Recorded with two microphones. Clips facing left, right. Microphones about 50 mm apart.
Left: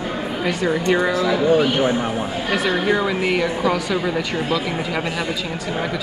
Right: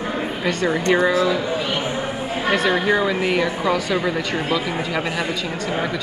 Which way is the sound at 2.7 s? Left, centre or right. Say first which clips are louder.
Even; centre.